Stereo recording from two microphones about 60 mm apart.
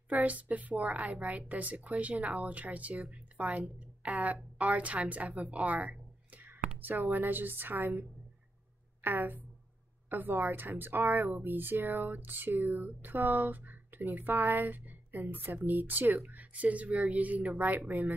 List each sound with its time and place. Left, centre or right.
0.1 s a woman's voice: right
6.3 s a sound: right
7.0 s speech: right
9.0 s speech: right